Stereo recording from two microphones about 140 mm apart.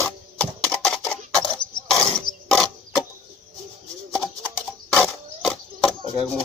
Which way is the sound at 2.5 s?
Centre (ahead or behind).